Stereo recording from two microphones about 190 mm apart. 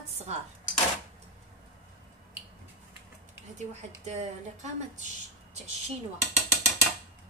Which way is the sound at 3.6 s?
35° right (ahead or behind).